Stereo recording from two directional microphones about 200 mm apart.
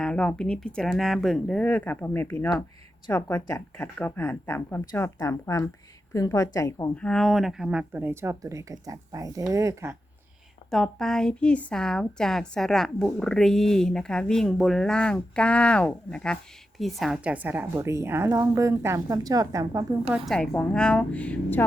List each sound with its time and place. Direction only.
0.0 s a woman's voice: 5° left (ahead or behind)
7.0 s speech: centre (ahead or behind); by 9.9 s 15° right (ahead or behind)
10.7 s a woman's voice: centre (ahead or behind); by 20.1 s 15° right (ahead or behind)
20.1 s a woman's voice: centre (ahead or behind)